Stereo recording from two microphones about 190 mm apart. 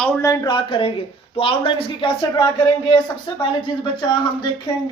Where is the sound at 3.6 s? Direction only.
25° left (ahead or behind).